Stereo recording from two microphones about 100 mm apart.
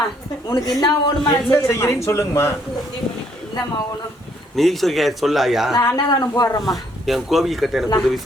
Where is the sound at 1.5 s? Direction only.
25° left (ahead or behind).